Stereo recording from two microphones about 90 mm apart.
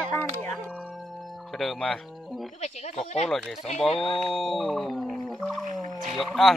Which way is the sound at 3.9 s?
90° left.